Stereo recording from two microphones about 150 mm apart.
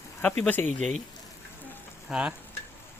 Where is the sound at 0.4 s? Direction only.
10° left (ahead or behind).